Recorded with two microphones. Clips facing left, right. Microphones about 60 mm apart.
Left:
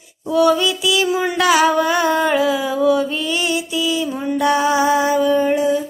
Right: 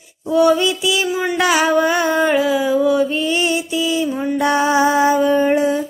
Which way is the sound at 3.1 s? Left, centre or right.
Right.